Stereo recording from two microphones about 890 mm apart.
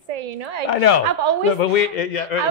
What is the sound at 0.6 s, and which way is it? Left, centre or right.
Speech, left.